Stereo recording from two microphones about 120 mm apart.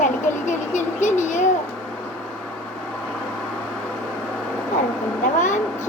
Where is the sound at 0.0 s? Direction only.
90° left.